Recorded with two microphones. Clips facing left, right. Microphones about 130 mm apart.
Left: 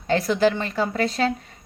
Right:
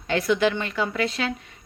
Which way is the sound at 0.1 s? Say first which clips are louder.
Left 2 dB; 35° left (ahead or behind).